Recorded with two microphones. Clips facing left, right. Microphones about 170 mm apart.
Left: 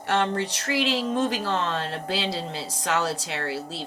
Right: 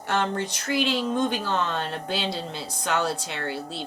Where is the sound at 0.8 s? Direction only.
35° left (ahead or behind).